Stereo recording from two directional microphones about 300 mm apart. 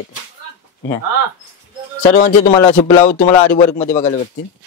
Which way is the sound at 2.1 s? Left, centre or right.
Left.